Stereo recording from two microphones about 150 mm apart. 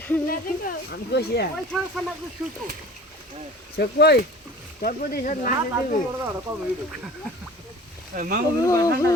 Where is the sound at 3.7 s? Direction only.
90° left.